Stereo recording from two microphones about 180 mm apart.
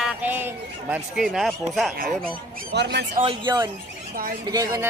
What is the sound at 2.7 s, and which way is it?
Speech, 75° right (ahead or behind).